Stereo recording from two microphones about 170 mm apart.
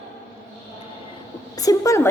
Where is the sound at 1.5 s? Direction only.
20° left (ahead or behind).